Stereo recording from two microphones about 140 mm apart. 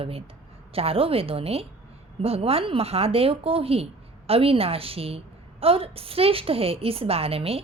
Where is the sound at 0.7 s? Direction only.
45° right (ahead or behind).